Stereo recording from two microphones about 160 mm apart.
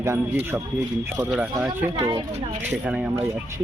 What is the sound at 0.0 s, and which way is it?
Speech, 15° right (ahead or behind).